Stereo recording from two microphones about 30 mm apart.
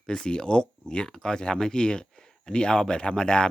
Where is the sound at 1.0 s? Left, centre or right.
Left.